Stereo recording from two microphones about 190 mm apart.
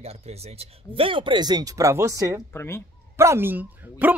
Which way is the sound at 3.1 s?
15° right (ahead or behind).